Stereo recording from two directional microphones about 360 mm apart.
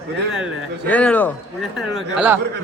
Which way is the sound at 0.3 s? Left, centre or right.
Centre.